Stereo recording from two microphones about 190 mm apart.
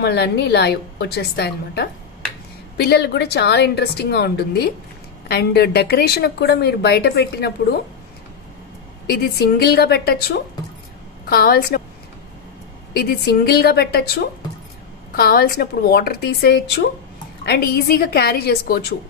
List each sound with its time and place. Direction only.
0.0 s a woman's voice: 60° left (ahead or behind)
9.0 s a woman's voice: 55° left (ahead or behind)
11.2 s a woman's voice: 55° left (ahead or behind)
12.9 s a woman's voice: 55° left (ahead or behind)